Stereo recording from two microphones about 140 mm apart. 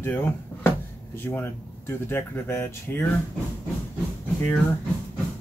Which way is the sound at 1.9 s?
15° left (ahead or behind).